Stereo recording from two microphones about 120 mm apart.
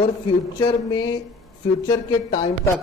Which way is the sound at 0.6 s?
35° left (ahead or behind).